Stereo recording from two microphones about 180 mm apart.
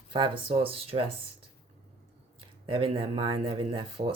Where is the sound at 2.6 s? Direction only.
30° right (ahead or behind).